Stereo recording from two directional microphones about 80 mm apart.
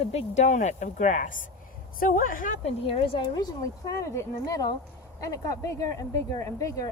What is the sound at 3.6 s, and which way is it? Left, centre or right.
Speech, left.